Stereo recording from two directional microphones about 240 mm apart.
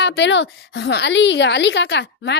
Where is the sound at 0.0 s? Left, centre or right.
Left.